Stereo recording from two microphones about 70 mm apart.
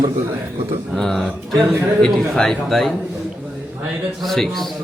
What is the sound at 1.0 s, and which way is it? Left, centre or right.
A man's voice, centre.